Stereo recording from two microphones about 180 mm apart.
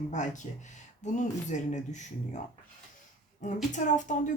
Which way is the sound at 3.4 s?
45° left (ahead or behind).